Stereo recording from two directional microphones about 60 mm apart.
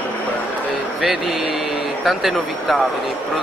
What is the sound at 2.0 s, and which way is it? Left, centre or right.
Speech, centre.